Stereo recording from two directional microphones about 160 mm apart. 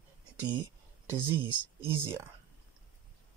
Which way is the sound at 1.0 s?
15° right (ahead or behind).